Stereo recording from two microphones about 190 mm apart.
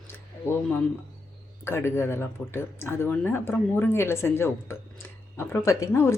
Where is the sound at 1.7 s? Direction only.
15° left (ahead or behind).